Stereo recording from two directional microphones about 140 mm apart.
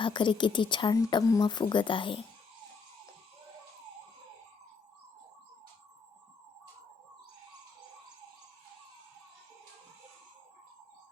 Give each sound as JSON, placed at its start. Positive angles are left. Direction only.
{"t": 0.0, "sound": "speech", "side_deg": 35}